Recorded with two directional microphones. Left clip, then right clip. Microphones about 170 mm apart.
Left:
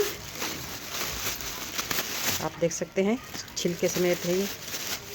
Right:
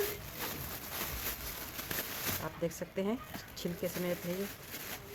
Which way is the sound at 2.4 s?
35° left (ahead or behind).